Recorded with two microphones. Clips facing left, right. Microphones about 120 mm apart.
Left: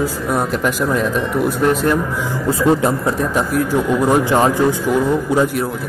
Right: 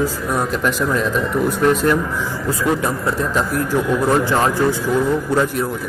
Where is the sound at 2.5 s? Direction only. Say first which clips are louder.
Left 5 dB; 30° left (ahead or behind).